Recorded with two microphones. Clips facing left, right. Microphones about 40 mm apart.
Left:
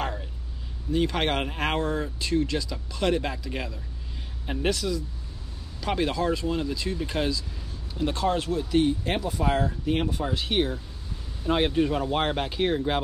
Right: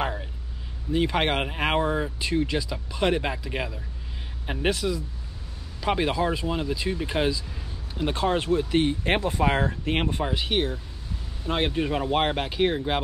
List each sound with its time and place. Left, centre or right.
0.0 s a sound: centre
0.9 s speech: centre; by 10.2 s right
10.3 s speech: centre